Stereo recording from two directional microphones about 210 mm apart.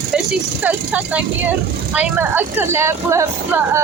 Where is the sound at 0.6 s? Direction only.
5° right (ahead or behind).